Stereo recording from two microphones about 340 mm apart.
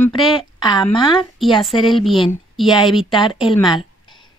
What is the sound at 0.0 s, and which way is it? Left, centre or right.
Speech, centre.